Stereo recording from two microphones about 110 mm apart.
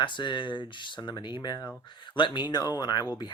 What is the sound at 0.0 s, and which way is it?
Speech, 45° left (ahead or behind).